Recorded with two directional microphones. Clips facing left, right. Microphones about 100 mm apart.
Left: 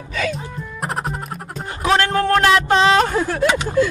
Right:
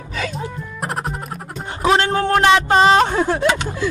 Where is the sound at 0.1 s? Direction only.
35° right (ahead or behind).